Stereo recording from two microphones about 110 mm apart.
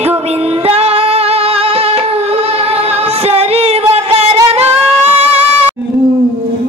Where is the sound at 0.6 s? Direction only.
65° right (ahead or behind).